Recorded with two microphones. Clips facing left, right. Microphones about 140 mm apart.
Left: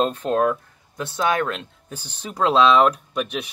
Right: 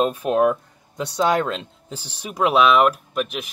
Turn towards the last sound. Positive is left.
turn(degrees=-5)  # may be behind; listen again after turning